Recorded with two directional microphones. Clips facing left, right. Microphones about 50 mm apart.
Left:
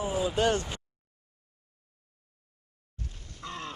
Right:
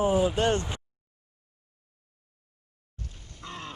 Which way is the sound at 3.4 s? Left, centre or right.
Centre.